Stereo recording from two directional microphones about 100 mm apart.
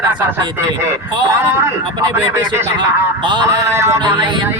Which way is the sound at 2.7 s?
50° right (ahead or behind).